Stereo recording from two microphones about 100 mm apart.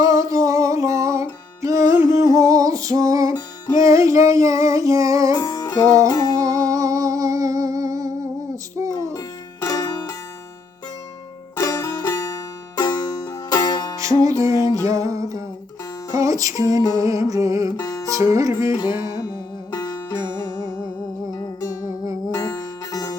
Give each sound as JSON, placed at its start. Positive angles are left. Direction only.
{"t": 0.0, "sound": "music", "side_deg": -35}
{"t": 3.8, "sound": "female singing", "side_deg": -30}
{"t": 5.3, "sound": "music", "side_deg": 40}
{"t": 6.1, "sound": "humming", "side_deg": 40}
{"t": 6.3, "sound": "music", "side_deg": -35}
{"t": 9.1, "sound": "music", "side_deg": 35}
{"t": 11.5, "sound": "music", "side_deg": 35}
{"t": 14.0, "sound": "music", "side_deg": -35}
{"t": 17.7, "sound": "music", "side_deg": 35}
{"t": 18.1, "sound": "music", "side_deg": -35}
{"t": 19.7, "sound": "music", "side_deg": 40}
{"t": 22.3, "sound": "music", "side_deg": 35}